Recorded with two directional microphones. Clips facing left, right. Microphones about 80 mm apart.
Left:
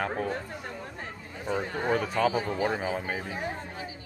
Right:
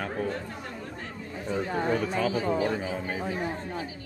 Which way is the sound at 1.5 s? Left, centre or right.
Centre.